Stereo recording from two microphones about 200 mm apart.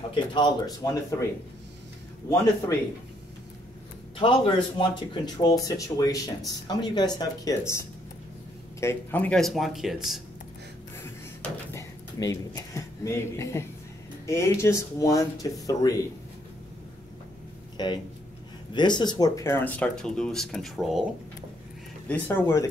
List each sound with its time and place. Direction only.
0.1 s speech: 25° left (ahead or behind)
4.2 s speech: 25° left (ahead or behind)
8.8 s speech: 10° left (ahead or behind)
11.4 s speech: 15° left (ahead or behind)
17.8 s speech: 20° left (ahead or behind)